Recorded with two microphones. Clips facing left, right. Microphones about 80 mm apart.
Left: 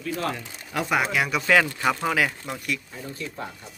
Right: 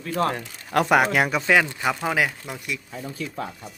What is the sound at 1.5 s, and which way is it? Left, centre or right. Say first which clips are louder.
Speech: even; centre.